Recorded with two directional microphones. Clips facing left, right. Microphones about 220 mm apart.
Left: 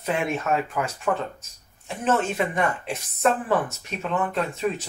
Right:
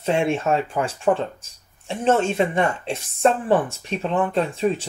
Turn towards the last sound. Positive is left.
turn(degrees=-30)  # may be behind; listen again after turning